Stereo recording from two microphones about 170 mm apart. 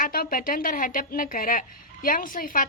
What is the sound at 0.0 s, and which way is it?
A woman's voice, 60° left (ahead or behind).